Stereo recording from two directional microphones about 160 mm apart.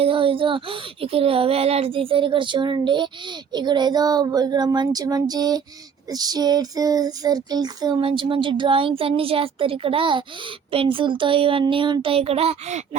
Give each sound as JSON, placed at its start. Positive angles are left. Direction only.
{"t": 0.0, "sound": "child singing", "side_deg": -35}
{"t": 3.5, "sound": "speech", "side_deg": -25}
{"t": 6.1, "sound": "child singing", "side_deg": -25}